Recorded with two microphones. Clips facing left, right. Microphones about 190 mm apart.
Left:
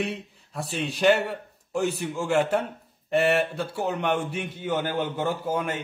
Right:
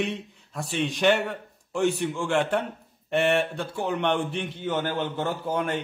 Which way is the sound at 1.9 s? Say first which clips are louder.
Right 2 dB; 40° left (ahead or behind).